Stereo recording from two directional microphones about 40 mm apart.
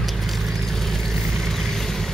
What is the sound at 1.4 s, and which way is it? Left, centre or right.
Vehicle, centre.